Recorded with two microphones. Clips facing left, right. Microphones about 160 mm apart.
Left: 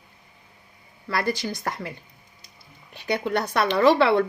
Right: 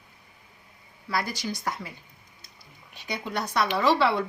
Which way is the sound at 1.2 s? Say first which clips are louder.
Left 5 dB; 60° left (ahead or behind).